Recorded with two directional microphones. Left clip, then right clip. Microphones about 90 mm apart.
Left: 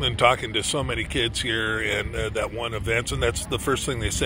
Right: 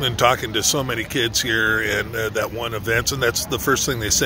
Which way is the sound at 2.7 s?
25° right (ahead or behind).